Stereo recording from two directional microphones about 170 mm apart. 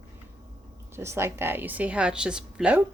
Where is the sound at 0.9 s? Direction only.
15° right (ahead or behind).